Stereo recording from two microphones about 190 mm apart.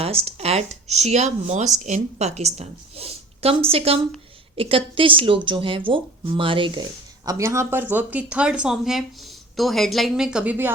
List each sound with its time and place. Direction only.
0.0 s speech: 30° right (ahead or behind)
7.3 s speech: 15° right (ahead or behind)